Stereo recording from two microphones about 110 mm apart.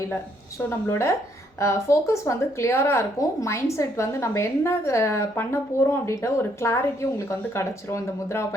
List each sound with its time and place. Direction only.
0.7 s a woman's voice: 25° left (ahead or behind)